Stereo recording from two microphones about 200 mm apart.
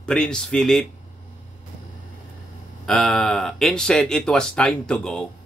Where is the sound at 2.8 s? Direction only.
Centre (ahead or behind).